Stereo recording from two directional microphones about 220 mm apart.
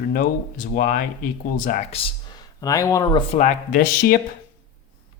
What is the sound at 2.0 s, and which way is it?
Speech, 20° left (ahead or behind).